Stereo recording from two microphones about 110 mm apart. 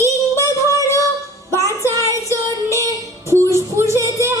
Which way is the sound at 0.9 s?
30° right (ahead or behind).